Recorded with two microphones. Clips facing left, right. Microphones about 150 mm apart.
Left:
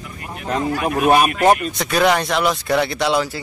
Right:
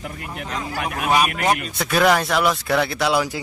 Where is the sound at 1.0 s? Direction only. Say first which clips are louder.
Left 5 dB; 60° left (ahead or behind).